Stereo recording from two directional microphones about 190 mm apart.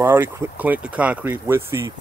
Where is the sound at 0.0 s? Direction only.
10° right (ahead or behind).